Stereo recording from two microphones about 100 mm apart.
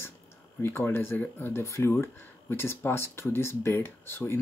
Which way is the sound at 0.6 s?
25° left (ahead or behind).